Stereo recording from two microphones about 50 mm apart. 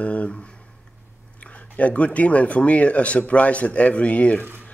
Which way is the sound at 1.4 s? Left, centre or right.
Left.